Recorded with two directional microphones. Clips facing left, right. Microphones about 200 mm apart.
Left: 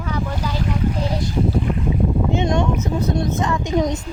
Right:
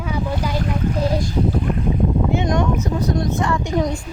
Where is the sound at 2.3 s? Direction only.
25° left (ahead or behind).